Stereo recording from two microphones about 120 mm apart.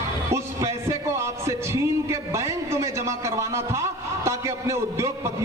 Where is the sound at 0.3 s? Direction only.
25° right (ahead or behind).